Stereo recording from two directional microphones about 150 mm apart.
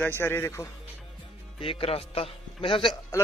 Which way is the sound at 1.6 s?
35° left (ahead or behind).